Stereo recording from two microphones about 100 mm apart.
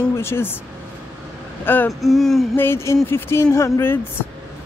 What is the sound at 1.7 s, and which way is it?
Speech, 20° left (ahead or behind).